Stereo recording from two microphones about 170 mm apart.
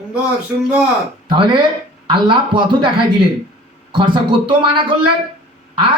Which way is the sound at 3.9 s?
30° right (ahead or behind).